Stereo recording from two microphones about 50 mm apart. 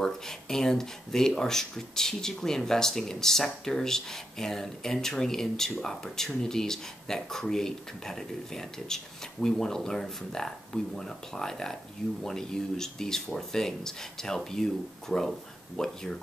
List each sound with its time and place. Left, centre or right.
0.0 s speech: centre